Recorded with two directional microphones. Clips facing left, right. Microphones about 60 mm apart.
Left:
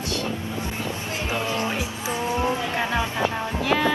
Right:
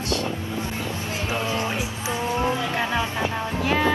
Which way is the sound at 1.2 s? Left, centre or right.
Right.